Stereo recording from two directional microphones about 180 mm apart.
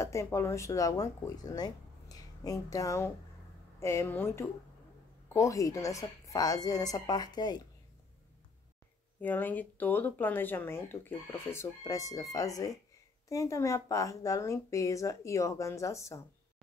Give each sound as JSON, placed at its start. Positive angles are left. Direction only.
{"t": 0.0, "sound": "a woman's voice", "side_deg": 15}
{"t": 9.2, "sound": "speech", "side_deg": 10}